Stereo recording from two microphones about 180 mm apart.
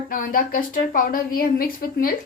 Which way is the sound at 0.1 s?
55° left (ahead or behind).